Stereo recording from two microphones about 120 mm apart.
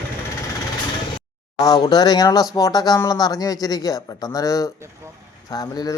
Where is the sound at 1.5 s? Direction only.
30° left (ahead or behind).